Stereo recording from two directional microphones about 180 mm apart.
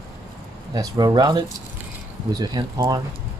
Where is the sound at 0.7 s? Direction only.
20° right (ahead or behind).